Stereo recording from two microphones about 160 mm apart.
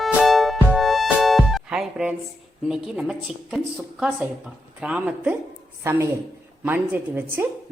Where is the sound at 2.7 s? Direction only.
5° right (ahead or behind).